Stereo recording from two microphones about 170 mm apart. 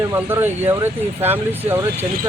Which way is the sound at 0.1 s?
15° right (ahead or behind).